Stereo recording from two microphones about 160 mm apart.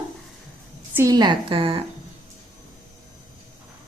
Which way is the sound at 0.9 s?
25° right (ahead or behind).